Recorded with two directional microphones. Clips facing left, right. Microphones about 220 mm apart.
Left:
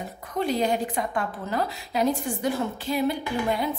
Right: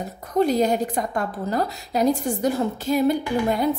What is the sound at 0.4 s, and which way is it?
A woman's voice, 40° right (ahead or behind).